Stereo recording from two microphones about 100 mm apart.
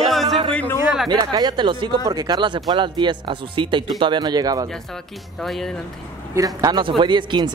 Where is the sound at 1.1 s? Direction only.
40° right (ahead or behind).